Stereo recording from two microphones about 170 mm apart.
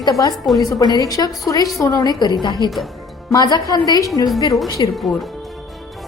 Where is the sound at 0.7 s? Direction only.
20° left (ahead or behind).